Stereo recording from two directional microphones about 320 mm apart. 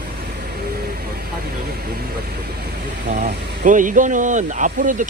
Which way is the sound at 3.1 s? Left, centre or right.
Right.